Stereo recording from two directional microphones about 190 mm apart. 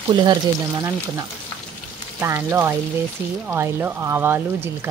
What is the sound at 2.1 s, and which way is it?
Speech, 15° right (ahead or behind).